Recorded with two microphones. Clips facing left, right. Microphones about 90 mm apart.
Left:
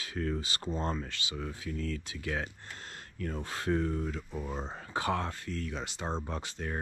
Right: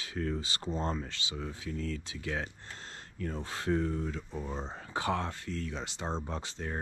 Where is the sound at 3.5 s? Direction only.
45° left (ahead or behind).